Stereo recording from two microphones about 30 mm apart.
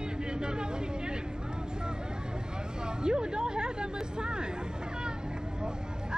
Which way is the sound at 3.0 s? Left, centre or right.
Right.